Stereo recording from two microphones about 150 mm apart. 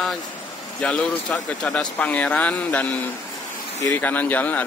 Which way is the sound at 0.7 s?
10° left (ahead or behind).